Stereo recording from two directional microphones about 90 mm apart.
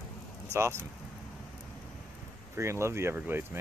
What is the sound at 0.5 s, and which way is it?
Speech, 30° right (ahead or behind).